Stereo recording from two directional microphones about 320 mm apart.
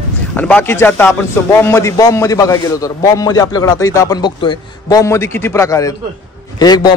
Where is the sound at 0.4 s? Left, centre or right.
Centre.